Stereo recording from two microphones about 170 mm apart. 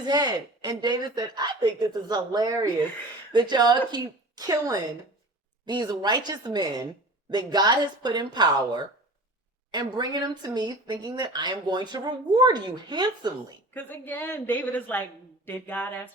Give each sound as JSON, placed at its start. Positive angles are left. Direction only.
{"t": 0.0, "sound": "speech", "side_deg": -25}
{"t": 13.7, "sound": "a woman's voice", "side_deg": 10}